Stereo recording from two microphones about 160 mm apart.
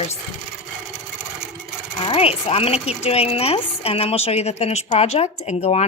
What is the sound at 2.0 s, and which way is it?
Speech, 40° left (ahead or behind).